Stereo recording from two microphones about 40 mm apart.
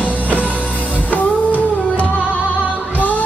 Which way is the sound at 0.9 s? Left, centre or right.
Left.